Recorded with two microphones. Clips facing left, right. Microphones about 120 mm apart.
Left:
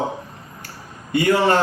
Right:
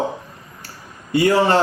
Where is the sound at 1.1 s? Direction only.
35° right (ahead or behind).